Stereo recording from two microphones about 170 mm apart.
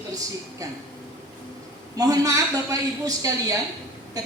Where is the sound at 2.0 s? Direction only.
20° right (ahead or behind).